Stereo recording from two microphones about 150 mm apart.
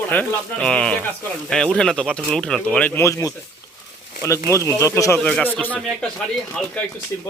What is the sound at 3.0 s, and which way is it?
Speech, 20° left (ahead or behind).